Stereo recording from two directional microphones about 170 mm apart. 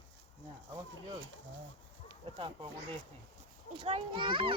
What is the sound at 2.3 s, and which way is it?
Speech, 30° right (ahead or behind).